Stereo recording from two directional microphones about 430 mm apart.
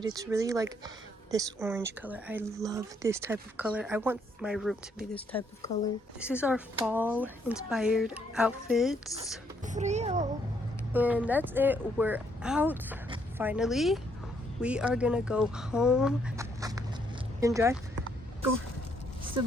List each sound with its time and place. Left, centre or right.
0.0 s speech: centre
6.1 s speech: centre
9.6 s speech: centre
10.9 s speech: centre